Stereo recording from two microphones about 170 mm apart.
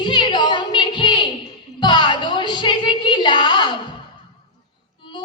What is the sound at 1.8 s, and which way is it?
Music, 25° left (ahead or behind).